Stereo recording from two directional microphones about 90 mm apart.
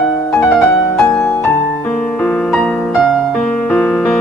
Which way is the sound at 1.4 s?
20° left (ahead or behind).